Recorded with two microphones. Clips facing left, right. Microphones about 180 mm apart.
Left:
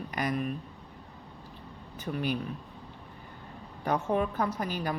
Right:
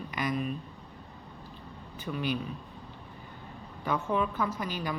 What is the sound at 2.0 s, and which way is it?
Speech, 45° left (ahead or behind).